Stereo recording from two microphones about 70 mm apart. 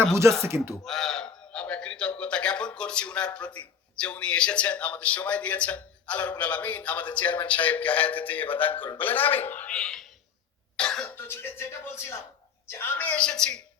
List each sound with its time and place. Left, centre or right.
0.1 s speech: right
0.7 s a sound: centre
1.6 s a man's voice: centre
9.7 s a man's voice: centre
11.1 s speech: left
13.1 s a man's voice: centre